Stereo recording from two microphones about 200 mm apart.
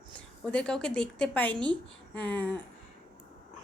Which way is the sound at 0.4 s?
5° left (ahead or behind).